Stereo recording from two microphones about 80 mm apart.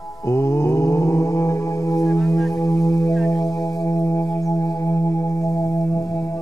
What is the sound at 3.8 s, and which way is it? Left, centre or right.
Music, left.